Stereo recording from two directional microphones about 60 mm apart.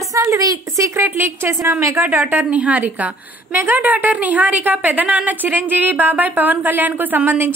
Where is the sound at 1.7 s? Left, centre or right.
Right.